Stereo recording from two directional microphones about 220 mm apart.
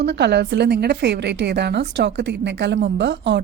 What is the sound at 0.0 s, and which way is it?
A woman's voice, 50° right (ahead or behind).